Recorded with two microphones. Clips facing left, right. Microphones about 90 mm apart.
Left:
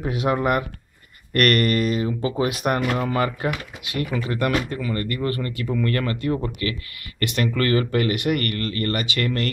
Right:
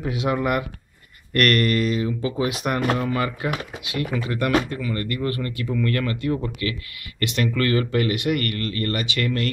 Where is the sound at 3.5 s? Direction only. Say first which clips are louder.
Even; 30° right (ahead or behind).